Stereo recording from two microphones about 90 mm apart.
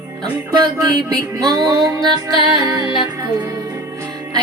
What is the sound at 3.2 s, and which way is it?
Music, 40° right (ahead or behind).